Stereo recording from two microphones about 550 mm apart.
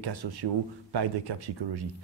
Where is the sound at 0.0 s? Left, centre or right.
Right.